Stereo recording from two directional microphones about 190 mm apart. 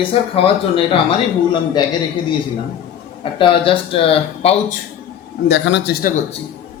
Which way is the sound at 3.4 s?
30° left (ahead or behind).